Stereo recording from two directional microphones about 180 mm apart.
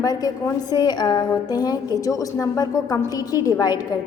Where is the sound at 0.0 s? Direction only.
20° left (ahead or behind).